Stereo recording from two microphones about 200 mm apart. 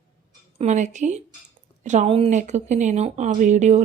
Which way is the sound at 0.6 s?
35° right (ahead or behind).